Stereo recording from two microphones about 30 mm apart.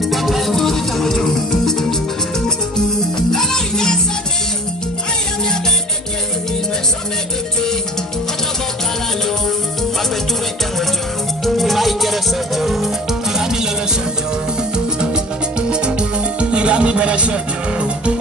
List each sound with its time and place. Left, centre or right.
0.1 s music: centre
3.3 s music: centre
11.4 s music: centre
13.4 s music: centre
15.7 s music: right